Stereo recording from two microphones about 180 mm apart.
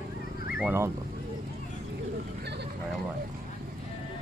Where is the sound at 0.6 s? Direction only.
10° right (ahead or behind).